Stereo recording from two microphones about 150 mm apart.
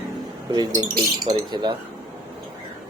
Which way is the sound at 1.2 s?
30° right (ahead or behind).